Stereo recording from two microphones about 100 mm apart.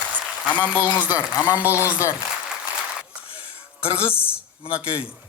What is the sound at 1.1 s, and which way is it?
Speech, 30° left (ahead or behind).